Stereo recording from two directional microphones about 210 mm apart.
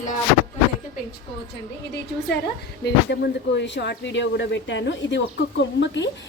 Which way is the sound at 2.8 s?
55° left (ahead or behind).